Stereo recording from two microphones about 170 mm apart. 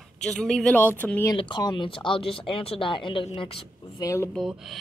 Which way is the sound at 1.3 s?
25° left (ahead or behind).